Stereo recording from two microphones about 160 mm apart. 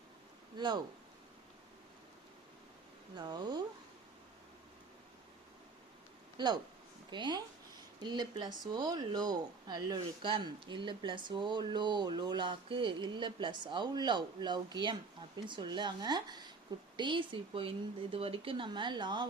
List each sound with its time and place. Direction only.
0.5 s speech: 30° right (ahead or behind)
3.2 s speech: 25° right (ahead or behind)
6.3 s speech: 25° right (ahead or behind)